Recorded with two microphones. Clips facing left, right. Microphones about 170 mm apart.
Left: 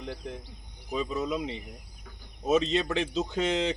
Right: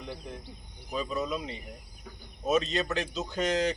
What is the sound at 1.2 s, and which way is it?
Speech, 15° left (ahead or behind).